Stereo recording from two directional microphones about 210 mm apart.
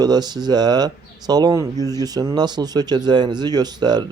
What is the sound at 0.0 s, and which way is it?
Speech, 20° right (ahead or behind).